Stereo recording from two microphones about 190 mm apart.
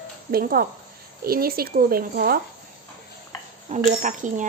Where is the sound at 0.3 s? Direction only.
50° right (ahead or behind).